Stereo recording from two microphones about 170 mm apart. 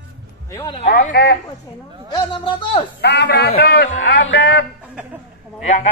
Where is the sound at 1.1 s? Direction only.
75° left (ahead or behind).